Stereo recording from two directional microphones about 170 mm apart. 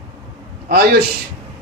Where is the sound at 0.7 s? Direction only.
65° right (ahead or behind).